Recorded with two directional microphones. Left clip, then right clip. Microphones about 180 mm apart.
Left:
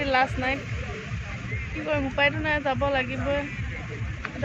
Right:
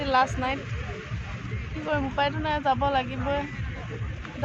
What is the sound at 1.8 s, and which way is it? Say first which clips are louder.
Speech: left 2 dB; 15° right (ahead or behind).